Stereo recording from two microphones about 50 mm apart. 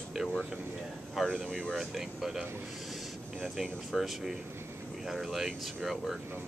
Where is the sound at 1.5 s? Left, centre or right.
Centre.